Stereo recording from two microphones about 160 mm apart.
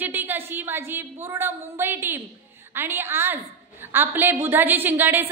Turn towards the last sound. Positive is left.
turn(degrees=-10)  # may be behind; listen again after turning